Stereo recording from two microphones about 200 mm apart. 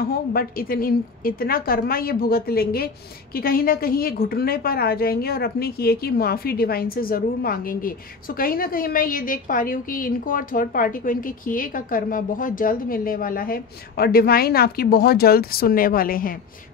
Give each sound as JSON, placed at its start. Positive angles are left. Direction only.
{"t": 0.0, "sound": "a woman's voice", "side_deg": 50}